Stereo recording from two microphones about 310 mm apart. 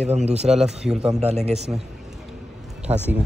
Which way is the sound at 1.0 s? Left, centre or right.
Centre.